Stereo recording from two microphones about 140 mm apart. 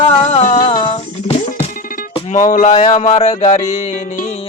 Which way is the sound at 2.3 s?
65° left (ahead or behind).